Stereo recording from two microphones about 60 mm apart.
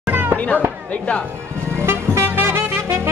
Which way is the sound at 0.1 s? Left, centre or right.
Right.